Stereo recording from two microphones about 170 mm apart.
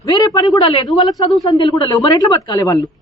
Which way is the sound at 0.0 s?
25° left (ahead or behind).